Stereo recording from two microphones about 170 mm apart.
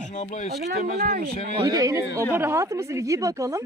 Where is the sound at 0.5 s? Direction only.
70° right (ahead or behind).